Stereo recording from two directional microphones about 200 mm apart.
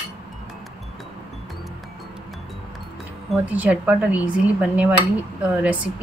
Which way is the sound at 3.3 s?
5° right (ahead or behind).